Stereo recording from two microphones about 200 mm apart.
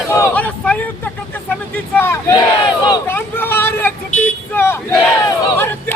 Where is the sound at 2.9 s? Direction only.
10° left (ahead or behind).